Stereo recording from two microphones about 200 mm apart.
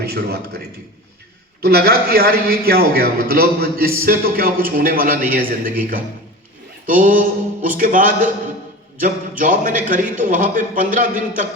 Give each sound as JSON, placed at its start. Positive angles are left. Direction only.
{"t": 0.0, "sound": "a man's voice", "side_deg": -50}
{"t": 1.6, "sound": "a man's voice", "side_deg": -50}
{"t": 9.4, "sound": "a man's voice", "side_deg": -40}